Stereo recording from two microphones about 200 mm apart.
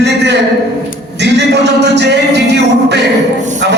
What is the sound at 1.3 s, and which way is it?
Music, 60° right (ahead or behind).